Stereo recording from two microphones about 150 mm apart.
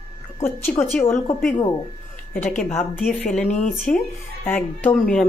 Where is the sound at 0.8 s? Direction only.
20° left (ahead or behind).